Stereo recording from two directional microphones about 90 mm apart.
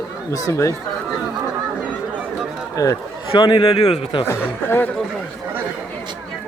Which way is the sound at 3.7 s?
70° left (ahead or behind).